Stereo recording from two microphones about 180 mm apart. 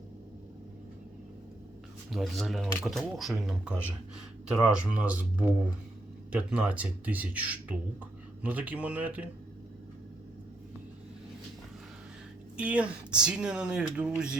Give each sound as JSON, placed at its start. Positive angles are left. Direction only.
{"t": 2.0, "sound": "speech", "side_deg": 0}
{"t": 12.5, "sound": "speech", "side_deg": -5}